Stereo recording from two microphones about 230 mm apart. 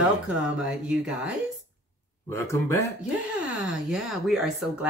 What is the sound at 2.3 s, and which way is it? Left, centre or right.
Speech, centre.